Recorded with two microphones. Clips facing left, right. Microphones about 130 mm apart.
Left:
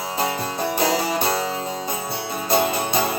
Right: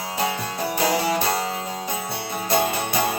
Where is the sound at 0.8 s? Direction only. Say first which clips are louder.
Right 1 dB; 25° left (ahead or behind).